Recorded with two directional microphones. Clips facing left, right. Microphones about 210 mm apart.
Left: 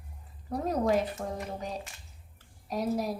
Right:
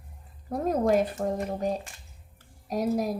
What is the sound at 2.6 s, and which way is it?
Speech, 45° right (ahead or behind).